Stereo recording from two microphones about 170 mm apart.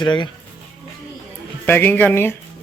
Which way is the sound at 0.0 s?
25° left (ahead or behind).